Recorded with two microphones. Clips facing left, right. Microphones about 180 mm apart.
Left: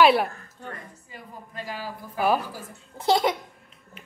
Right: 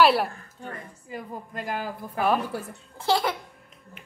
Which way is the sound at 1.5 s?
50° right (ahead or behind).